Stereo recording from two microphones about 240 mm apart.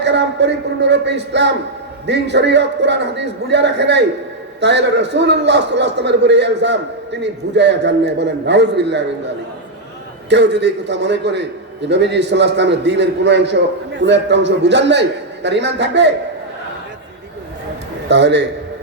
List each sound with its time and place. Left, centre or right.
0.0 s a man's voice: right
10.2 s a man's voice: right
18.1 s a man's voice: right